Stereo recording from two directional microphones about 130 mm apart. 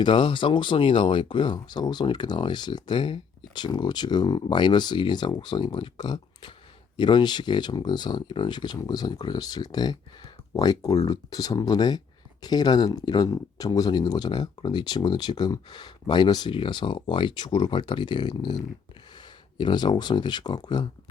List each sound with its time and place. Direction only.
0.0 s speech: 40° left (ahead or behind)